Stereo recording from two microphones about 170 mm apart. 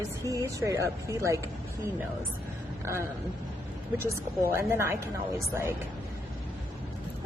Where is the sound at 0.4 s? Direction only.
20° right (ahead or behind).